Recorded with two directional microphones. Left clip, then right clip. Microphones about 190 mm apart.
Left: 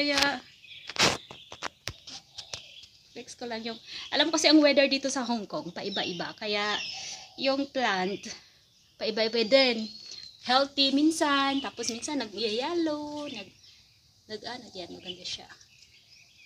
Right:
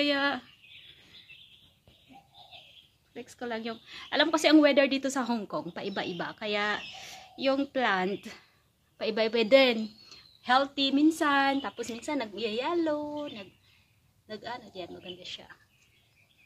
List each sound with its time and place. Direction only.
0.0 s speech: 20° right (ahead or behind)
3.2 s a woman's voice: 5° right (ahead or behind)
10.4 s a woman's voice: 10° left (ahead or behind)
14.2 s a woman's voice: 5° left (ahead or behind)